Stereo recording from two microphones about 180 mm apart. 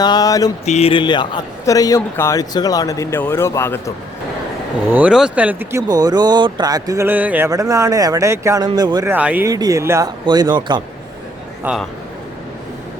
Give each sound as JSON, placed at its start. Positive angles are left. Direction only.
{"t": 0.0, "sound": "mantra", "side_deg": 20}
{"t": 0.6, "sound": "a man's voice", "side_deg": 35}
{"t": 4.9, "sound": "speech", "side_deg": -10}
{"t": 5.9, "sound": "speech", "side_deg": -20}
{"t": 9.1, "sound": "speech", "side_deg": -10}
{"t": 9.5, "sound": "speech", "side_deg": -20}
{"t": 11.6, "sound": "a man's voice", "side_deg": -5}